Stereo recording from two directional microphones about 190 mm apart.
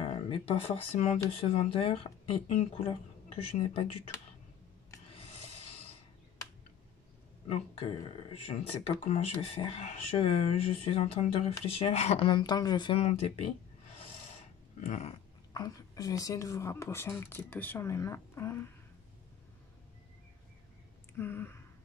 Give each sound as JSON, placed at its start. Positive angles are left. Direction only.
{"t": 0.0, "sound": "speech", "side_deg": 30}
{"t": 5.1, "sound": "rub", "side_deg": 30}
{"t": 7.4, "sound": "speech", "side_deg": 30}
{"t": 14.8, "sound": "speech", "side_deg": 35}
{"t": 15.5, "sound": "speech", "side_deg": 20}
{"t": 21.2, "sound": "a sound", "side_deg": 10}